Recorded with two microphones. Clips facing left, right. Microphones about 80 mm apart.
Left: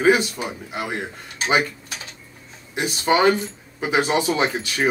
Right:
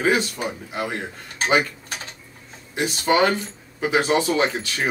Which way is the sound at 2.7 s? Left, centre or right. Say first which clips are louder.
Even; centre.